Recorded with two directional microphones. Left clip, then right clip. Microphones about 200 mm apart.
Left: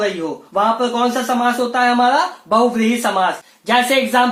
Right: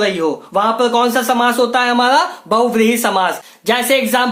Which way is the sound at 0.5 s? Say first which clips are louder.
Right 2 dB; 35° right (ahead or behind).